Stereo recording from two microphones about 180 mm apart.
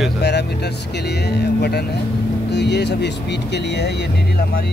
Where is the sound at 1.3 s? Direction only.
65° left (ahead or behind).